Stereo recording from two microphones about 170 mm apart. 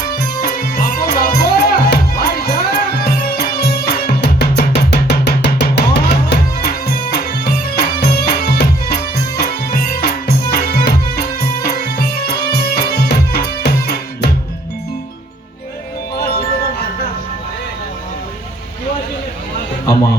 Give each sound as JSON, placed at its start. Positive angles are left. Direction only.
{"t": 0.4, "sound": "music", "side_deg": 65}
{"t": 7.1, "sound": "music", "side_deg": 65}